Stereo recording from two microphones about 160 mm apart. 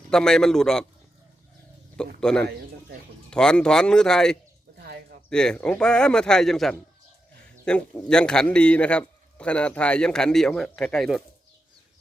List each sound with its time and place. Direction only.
0.1 s a man's voice: 5° left (ahead or behind)
2.2 s a man's voice: 5° left (ahead or behind)
4.8 s a sound: 75° right (ahead or behind)
5.3 s a man's voice: 5° left (ahead or behind)